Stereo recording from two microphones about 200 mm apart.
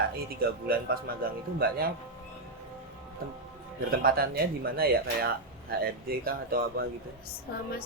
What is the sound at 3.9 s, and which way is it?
Speech, 50° right (ahead or behind).